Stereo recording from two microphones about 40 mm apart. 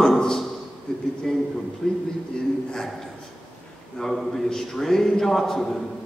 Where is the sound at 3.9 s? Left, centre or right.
Centre.